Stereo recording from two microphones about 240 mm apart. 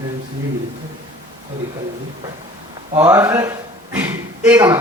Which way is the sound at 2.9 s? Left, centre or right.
Centre.